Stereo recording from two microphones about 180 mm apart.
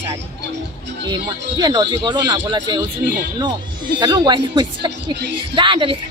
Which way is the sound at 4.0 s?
25° right (ahead or behind).